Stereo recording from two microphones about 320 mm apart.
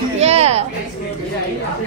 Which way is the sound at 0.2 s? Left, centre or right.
Centre.